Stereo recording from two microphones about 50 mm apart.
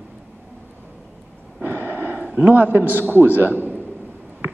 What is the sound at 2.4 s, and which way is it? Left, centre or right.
A man's voice, right.